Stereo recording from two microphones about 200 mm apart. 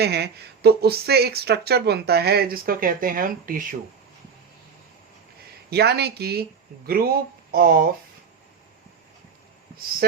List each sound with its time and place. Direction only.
0.0 s speech: 55° right (ahead or behind)
5.7 s speech: 55° right (ahead or behind)
10.0 s a sound: 50° right (ahead or behind)